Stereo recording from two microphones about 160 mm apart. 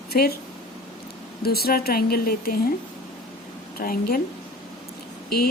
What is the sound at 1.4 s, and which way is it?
Speech, 75° left (ahead or behind).